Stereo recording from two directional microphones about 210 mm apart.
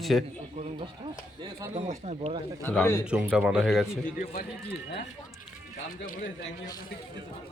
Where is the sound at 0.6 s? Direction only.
25° right (ahead or behind).